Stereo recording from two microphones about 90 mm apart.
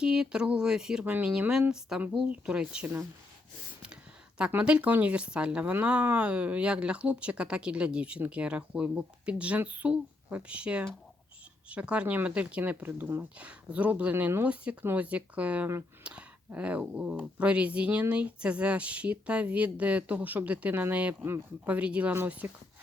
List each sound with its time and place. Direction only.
0.0 s speech: 10° right (ahead or behind)
4.4 s speech: 10° right (ahead or behind)